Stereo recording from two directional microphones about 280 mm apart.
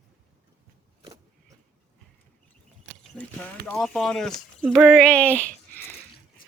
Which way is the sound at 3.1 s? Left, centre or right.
Centre.